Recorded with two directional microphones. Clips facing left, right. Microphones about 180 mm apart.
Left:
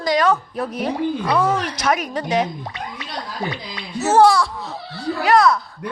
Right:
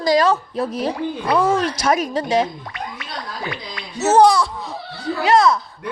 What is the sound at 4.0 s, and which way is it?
Speech, 20° right (ahead or behind).